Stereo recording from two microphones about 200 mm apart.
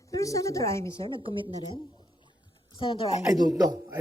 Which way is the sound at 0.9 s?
25° right (ahead or behind).